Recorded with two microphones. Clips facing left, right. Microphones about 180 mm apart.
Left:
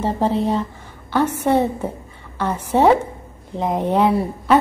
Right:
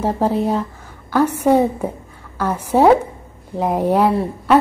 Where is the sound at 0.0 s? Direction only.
10° right (ahead or behind).